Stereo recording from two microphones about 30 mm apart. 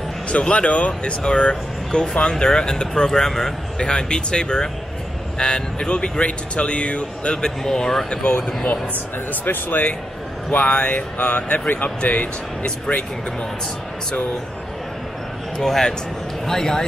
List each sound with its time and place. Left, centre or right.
0.3 s speech: left
3.1 s speech: centre
3.7 s speech: left
7.4 s speech: centre
8.1 s speech: left
9.3 s speech: left
10.5 s speech: left
10.8 s speech: left
12.6 s speech: left
15.6 s speech: centre